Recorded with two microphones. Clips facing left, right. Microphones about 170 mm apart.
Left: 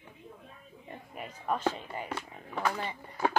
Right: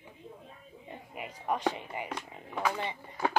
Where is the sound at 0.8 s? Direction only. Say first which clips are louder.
Even; 15° right (ahead or behind).